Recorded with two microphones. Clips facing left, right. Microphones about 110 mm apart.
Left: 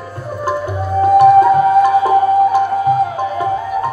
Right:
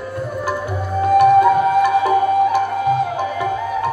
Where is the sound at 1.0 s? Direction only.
40° left (ahead or behind).